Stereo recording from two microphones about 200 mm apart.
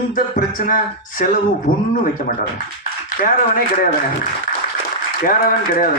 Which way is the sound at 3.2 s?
45° left (ahead or behind).